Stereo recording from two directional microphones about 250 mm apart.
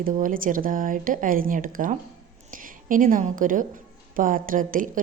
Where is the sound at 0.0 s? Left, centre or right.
Right.